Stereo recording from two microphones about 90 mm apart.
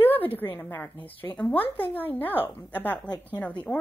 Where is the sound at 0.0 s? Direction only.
20° left (ahead or behind).